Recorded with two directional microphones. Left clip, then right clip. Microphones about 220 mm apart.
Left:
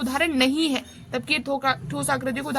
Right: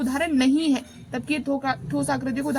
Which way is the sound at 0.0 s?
25° left (ahead or behind).